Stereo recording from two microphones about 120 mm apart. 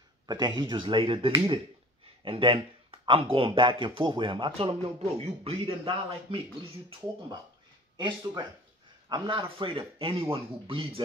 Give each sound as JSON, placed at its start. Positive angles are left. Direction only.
{"t": 0.3, "sound": "speech", "side_deg": -35}
{"t": 8.0, "sound": "speech", "side_deg": -35}